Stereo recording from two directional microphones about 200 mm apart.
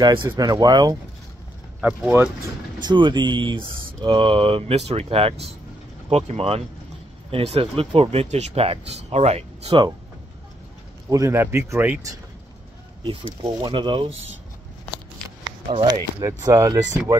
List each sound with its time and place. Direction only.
0.0 s speech: 20° right (ahead or behind)
1.8 s speech: 5° right (ahead or behind)
2.8 s speech: 20° right (ahead or behind)
11.1 s speech: 15° right (ahead or behind)
13.0 s speech: 25° right (ahead or behind)
15.7 s speech: 20° right (ahead or behind)